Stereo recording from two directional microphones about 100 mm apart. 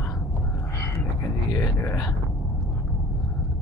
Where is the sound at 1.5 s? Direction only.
30° left (ahead or behind).